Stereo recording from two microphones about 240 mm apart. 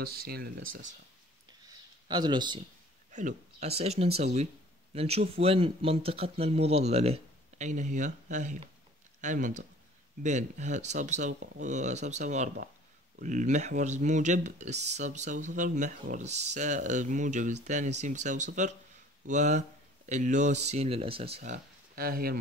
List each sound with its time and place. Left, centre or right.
0.0 s speech: right
2.0 s speech: centre
3.1 s speech: right